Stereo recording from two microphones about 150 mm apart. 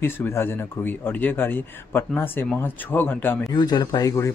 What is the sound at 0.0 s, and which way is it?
Speech, 15° left (ahead or behind).